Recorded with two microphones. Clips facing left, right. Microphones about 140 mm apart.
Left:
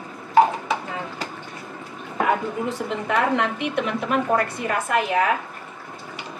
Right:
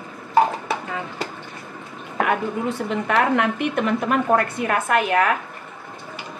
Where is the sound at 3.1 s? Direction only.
55° right (ahead or behind).